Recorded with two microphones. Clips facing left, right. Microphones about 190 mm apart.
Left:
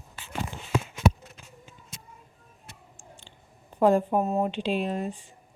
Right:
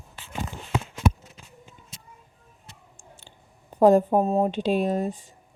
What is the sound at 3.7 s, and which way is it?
Speech, 40° right (ahead or behind).